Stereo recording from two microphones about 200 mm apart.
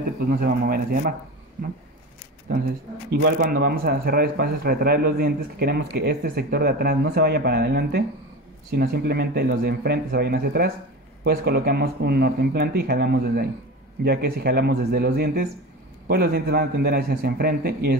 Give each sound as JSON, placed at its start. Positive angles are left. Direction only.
{"t": 0.3, "sound": "speech", "side_deg": -45}
{"t": 3.3, "sound": "speech", "side_deg": -50}